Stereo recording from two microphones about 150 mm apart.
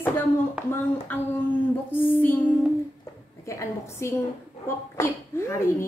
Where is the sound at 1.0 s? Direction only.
15° left (ahead or behind).